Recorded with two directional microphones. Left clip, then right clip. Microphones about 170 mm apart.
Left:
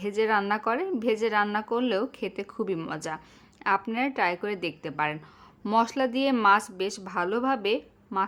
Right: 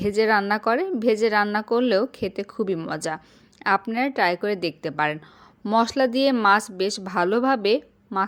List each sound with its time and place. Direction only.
0.0 s a woman's voice: 25° right (ahead or behind)